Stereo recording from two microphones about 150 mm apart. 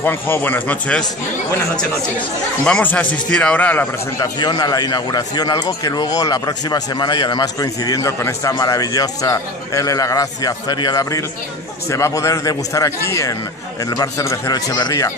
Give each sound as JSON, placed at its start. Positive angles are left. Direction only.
{"t": 0.0, "sound": "speech", "side_deg": 15}
{"t": 4.2, "sound": "a man's voice", "side_deg": 25}